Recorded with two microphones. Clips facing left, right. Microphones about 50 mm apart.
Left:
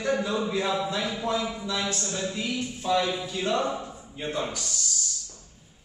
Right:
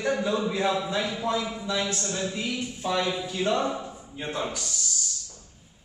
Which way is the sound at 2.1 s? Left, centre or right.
Centre.